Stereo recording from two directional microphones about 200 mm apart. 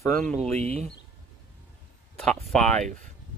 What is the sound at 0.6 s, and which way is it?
Speech, 35° right (ahead or behind).